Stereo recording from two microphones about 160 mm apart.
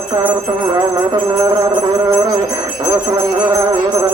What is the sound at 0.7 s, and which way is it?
Speech, 25° right (ahead or behind).